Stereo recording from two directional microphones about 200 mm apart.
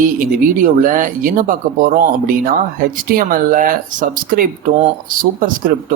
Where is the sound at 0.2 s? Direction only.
45° right (ahead or behind).